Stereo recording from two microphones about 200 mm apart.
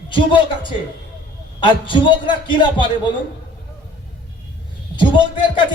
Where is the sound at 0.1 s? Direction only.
25° left (ahead or behind).